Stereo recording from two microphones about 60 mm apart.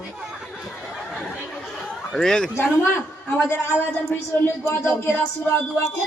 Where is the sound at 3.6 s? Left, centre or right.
Left.